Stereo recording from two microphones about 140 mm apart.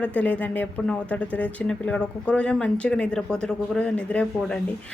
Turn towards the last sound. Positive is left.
turn(degrees=10)  # may be behind; listen again after turning